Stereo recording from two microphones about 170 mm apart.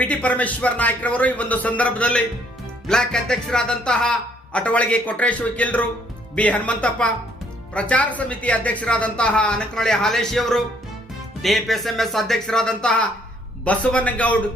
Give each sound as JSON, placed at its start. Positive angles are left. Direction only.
{"t": 0.0, "sound": "speech", "side_deg": 10}